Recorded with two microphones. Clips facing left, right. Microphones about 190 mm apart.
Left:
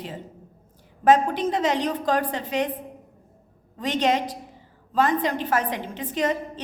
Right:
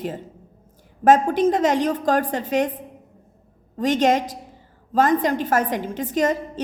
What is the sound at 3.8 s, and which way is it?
A woman's voice, 45° right (ahead or behind).